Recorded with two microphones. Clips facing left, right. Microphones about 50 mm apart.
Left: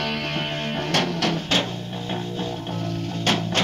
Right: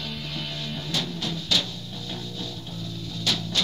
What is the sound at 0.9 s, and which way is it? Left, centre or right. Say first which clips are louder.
Music: left 8 dB; left.